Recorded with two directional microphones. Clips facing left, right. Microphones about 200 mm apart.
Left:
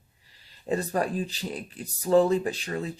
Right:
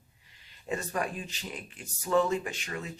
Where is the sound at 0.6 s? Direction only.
35° left (ahead or behind).